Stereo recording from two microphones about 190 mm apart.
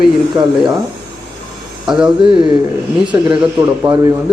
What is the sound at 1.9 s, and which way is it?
Speech, 5° right (ahead or behind).